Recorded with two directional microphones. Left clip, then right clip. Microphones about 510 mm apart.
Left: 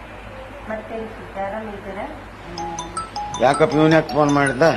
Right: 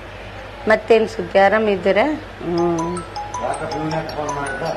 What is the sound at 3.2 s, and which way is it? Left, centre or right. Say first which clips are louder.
Music: left 10 dB; centre.